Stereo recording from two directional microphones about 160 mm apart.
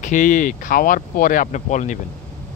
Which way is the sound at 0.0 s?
55° left (ahead or behind).